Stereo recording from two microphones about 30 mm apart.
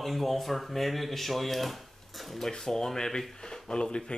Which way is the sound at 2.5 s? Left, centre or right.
Left.